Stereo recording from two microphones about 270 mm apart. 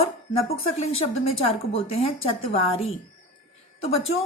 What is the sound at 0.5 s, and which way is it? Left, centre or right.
A woman's voice, left.